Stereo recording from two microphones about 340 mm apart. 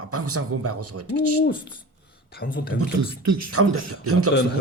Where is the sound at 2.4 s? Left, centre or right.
Left.